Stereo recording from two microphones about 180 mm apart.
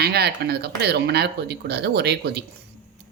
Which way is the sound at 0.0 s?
65° right (ahead or behind).